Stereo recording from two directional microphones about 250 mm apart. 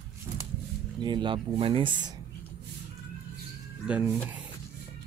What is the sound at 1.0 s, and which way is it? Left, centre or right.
Speech, centre.